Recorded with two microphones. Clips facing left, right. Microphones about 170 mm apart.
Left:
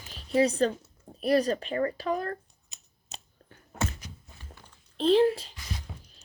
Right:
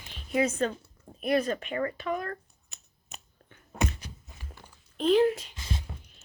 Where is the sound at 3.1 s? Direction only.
35° left (ahead or behind).